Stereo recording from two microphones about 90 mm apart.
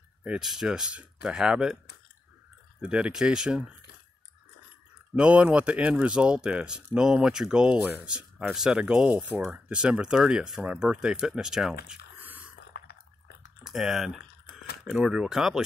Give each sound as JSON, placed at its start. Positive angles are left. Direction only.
{"t": 0.2, "sound": "speech", "side_deg": -5}
{"t": 2.8, "sound": "speech", "side_deg": -15}
{"t": 5.1, "sound": "speech", "side_deg": -10}
{"t": 12.2, "sound": "biting", "side_deg": -20}
{"t": 13.7, "sound": "speech", "side_deg": -5}